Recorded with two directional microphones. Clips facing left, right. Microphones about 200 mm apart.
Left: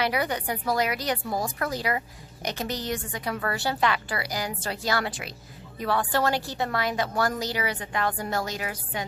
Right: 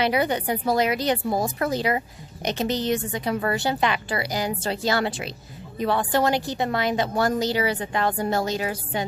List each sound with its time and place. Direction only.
0.0 s a woman's voice: 25° right (ahead or behind)